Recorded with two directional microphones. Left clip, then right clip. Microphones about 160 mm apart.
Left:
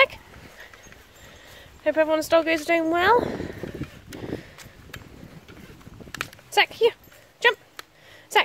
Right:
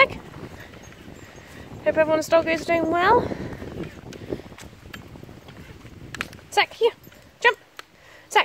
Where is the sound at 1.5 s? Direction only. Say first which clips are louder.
Right 1 dB; 5° left (ahead or behind).